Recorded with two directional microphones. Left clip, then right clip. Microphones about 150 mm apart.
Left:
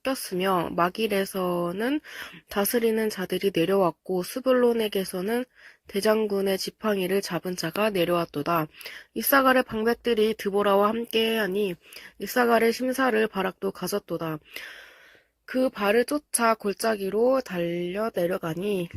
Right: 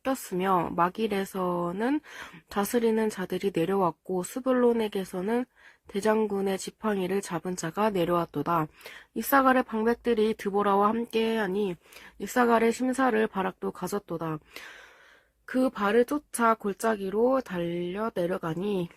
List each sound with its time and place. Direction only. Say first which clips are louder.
0.0 s speech: left 2 dB; 10° left (ahead or behind)
7.8 s speech: left 2 dB; centre (ahead or behind)